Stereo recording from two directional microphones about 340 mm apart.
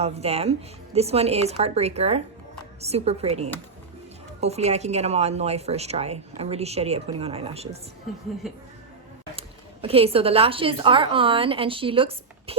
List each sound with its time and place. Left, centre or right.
0.0 s a woman's voice: centre
8.4 s speech: centre
9.8 s a woman's voice: centre